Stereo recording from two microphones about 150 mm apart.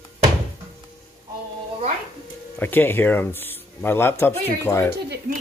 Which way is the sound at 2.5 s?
15° left (ahead or behind).